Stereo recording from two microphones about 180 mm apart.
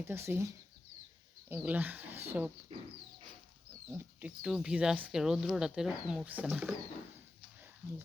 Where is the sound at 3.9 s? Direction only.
10° right (ahead or behind).